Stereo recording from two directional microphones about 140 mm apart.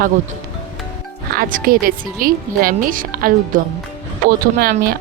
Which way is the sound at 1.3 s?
90° right.